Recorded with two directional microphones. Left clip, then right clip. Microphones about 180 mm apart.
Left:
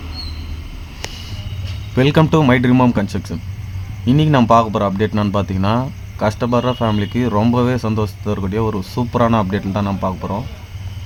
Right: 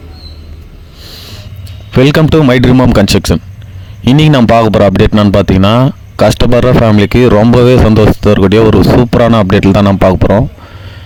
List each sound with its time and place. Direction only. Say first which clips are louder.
2.0 s speech: right 7 dB; 55° right (ahead or behind)
4.3 s speech: right 5 dB; 55° right (ahead or behind)